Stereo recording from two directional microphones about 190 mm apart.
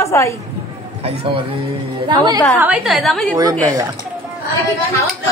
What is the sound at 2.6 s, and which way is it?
Speech, 5° right (ahead or behind).